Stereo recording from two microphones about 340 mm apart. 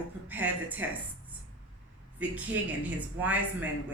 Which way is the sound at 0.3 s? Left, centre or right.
Centre.